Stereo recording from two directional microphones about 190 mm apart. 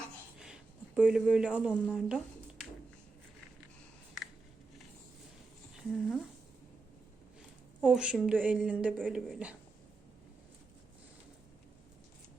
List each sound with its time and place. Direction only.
0.9 s speech: 5° right (ahead or behind)
5.9 s speech: centre (ahead or behind)
7.9 s a woman's voice: 5° right (ahead or behind)